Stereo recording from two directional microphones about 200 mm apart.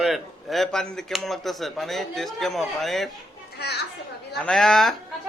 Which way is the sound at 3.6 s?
55° left (ahead or behind).